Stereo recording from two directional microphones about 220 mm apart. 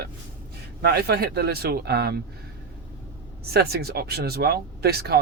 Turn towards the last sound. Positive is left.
turn(degrees=-45)  # may be behind; listen again after turning